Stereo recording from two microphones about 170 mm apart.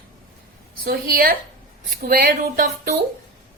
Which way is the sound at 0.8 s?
60° right (ahead or behind).